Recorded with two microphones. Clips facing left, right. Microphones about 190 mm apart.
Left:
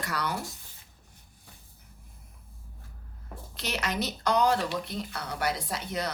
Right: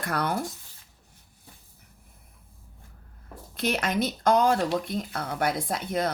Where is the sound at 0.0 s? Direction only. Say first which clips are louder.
Right 4 dB; 55° right (ahead or behind).